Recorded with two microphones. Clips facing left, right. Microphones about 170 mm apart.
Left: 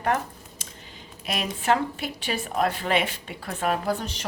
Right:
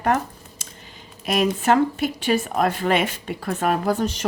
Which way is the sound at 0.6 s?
45° right (ahead or behind).